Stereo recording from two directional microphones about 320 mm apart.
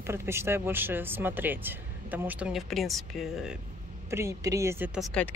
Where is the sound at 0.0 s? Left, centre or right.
Centre.